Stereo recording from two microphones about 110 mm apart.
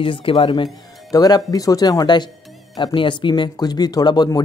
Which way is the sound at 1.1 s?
35° left (ahead or behind).